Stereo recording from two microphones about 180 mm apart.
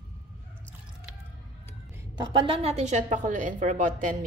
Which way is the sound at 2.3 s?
30° right (ahead or behind).